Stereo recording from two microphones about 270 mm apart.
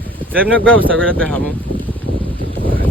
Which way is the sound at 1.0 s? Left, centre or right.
Centre.